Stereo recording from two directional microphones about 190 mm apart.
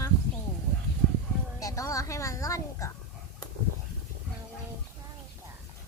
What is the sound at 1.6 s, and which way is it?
Speech, 15° left (ahead or behind).